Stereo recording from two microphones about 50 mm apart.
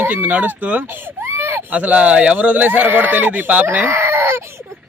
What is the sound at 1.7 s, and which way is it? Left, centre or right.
Speech, right.